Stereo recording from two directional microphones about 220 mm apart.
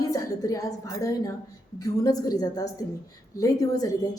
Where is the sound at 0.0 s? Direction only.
15° left (ahead or behind).